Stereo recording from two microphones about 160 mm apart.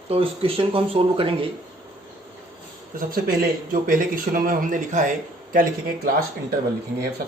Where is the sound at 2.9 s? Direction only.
65° right (ahead or behind); by 5.1 s 50° right (ahead or behind).